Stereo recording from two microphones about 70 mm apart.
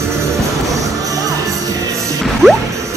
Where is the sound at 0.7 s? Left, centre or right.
Right.